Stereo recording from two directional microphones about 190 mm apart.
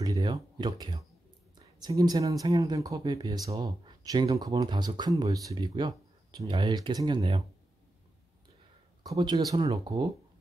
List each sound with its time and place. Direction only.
0.0 s speech: 20° right (ahead or behind)
7.2 s speech: 30° right (ahead or behind)
9.0 s speech: 20° right (ahead or behind)